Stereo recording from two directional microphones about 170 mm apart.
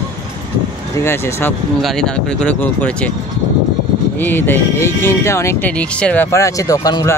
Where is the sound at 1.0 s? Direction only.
15° left (ahead or behind).